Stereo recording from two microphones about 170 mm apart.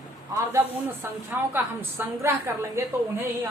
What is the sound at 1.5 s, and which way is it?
A woman's voice, 15° right (ahead or behind).